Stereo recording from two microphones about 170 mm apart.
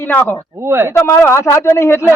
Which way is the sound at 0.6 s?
15° right (ahead or behind).